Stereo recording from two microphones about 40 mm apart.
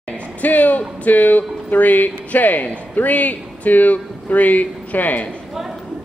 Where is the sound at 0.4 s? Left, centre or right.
Left.